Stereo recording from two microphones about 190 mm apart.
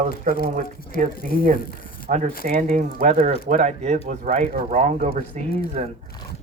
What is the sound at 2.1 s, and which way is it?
Speech, 40° right (ahead or behind).